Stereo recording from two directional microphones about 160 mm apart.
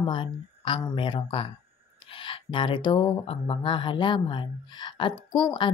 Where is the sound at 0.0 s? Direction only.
30° left (ahead or behind).